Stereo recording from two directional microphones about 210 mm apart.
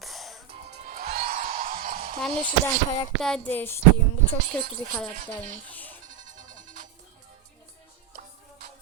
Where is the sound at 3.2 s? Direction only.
5° left (ahead or behind).